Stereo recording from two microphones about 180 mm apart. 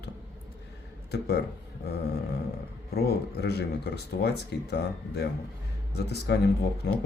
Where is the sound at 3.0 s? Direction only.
65° left (ahead or behind).